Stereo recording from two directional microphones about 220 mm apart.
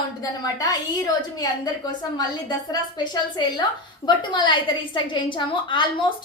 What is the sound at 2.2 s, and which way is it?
Speech, 20° left (ahead or behind).